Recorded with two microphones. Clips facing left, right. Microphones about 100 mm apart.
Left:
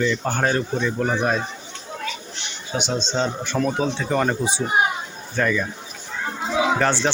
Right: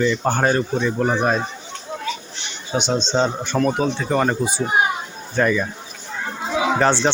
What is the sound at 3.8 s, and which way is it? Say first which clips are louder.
Speech: right 2 dB; 5° right (ahead or behind).